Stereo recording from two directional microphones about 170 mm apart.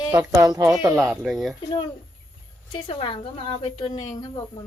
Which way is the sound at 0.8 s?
20° right (ahead or behind).